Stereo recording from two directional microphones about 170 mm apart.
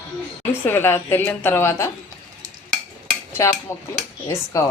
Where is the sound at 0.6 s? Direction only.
15° left (ahead or behind).